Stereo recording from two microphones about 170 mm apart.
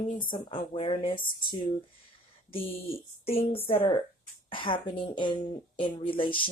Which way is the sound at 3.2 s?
35° left (ahead or behind).